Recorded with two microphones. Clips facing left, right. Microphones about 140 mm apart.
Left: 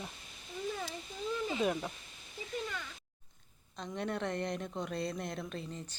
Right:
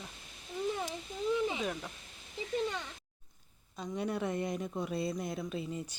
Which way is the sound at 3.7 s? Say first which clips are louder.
Right 2 dB; 5° right (ahead or behind).